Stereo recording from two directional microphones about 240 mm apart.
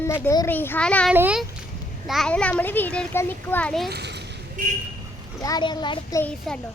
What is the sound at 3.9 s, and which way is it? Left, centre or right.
Speech, right.